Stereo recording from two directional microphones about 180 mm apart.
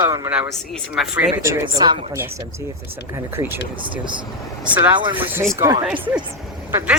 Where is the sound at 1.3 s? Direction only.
15° right (ahead or behind).